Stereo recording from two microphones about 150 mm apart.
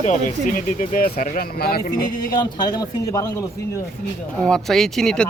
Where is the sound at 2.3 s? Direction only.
25° left (ahead or behind).